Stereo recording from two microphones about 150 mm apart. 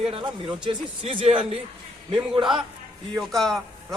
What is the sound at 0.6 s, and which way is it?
A man's voice, 30° right (ahead or behind).